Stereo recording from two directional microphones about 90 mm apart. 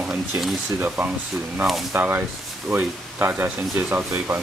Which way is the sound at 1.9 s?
25° right (ahead or behind).